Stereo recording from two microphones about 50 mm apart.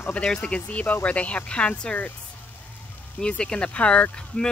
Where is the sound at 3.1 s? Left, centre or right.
Centre.